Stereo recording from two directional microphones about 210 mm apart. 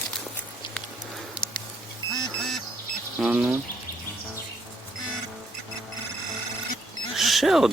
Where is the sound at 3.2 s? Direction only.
5° right (ahead or behind).